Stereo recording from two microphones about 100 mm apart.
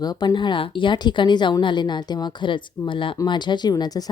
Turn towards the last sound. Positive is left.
turn(degrees=40)  # may be behind; listen again after turning